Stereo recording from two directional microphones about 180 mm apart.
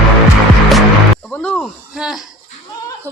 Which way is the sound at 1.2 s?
5° left (ahead or behind).